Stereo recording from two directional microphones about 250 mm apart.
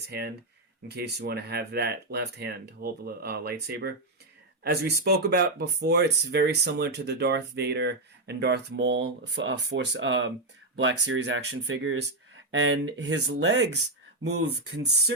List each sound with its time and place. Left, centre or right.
0.1 s speech: right